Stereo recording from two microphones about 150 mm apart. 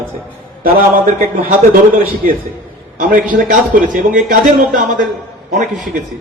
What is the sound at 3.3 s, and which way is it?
A man's voice, 65° right (ahead or behind).